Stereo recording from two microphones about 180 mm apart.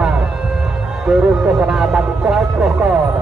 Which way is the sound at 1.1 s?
5° right (ahead or behind).